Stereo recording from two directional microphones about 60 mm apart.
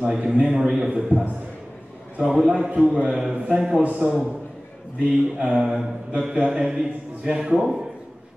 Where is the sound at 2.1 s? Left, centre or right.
Centre.